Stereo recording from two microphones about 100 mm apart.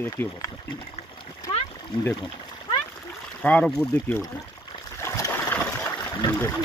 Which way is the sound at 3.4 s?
10° left (ahead or behind).